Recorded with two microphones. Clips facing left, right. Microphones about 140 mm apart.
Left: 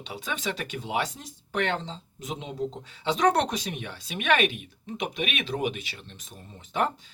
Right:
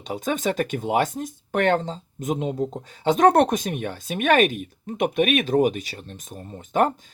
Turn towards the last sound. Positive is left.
turn(degrees=-50)  # may be behind; listen again after turning